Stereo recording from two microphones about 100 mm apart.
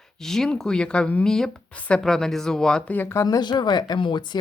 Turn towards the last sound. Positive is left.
turn(degrees=50)  # may be behind; listen again after turning